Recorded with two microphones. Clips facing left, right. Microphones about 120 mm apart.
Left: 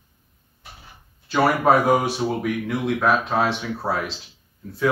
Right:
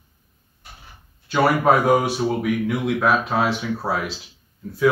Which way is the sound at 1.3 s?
Centre (ahead or behind).